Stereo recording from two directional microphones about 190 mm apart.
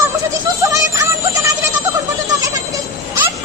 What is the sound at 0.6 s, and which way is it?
Music, 15° right (ahead or behind).